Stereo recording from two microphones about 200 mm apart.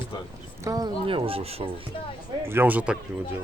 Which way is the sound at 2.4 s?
10° right (ahead or behind).